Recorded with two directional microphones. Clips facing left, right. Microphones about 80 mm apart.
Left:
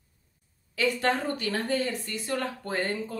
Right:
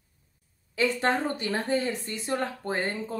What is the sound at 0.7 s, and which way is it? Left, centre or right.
Speech, right.